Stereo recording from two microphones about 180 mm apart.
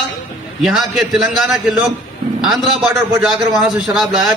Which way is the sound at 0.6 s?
Centre (ahead or behind).